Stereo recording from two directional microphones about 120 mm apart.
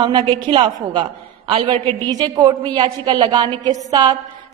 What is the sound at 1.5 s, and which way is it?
Speech, 50° right (ahead or behind).